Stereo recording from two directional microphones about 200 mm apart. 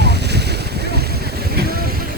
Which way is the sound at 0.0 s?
55° right (ahead or behind).